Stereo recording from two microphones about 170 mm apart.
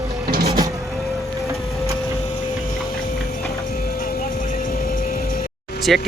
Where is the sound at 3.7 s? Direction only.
60° left (ahead or behind).